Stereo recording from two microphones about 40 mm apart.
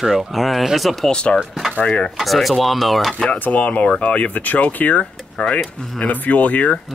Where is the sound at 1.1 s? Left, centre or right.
Left.